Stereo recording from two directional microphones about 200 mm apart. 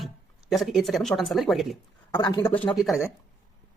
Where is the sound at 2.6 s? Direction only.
Centre (ahead or behind).